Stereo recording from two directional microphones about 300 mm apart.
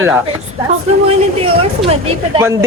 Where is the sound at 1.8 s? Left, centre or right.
Centre.